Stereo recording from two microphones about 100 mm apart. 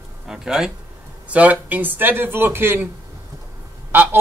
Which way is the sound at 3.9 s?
20° right (ahead or behind).